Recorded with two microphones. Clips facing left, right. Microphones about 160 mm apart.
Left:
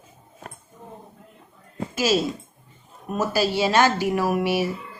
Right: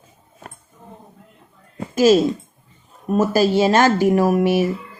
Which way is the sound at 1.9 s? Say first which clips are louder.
Right 9 dB; 45° right (ahead or behind).